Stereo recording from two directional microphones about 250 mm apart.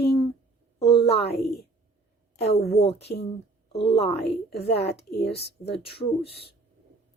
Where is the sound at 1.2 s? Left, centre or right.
Left.